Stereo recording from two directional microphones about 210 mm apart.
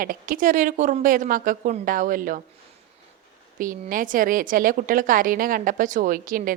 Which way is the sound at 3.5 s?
40° right (ahead or behind).